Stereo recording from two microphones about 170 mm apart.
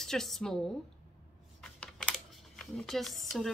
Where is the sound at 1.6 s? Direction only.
5° left (ahead or behind).